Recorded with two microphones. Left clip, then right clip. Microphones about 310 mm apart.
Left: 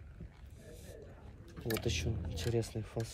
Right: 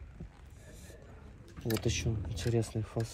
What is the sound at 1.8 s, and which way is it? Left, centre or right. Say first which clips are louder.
Speech: right 2 dB; centre.